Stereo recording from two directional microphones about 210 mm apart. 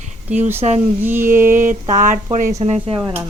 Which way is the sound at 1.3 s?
40° right (ahead or behind).